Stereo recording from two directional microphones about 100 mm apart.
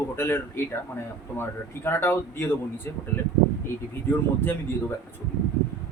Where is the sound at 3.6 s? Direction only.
20° left (ahead or behind).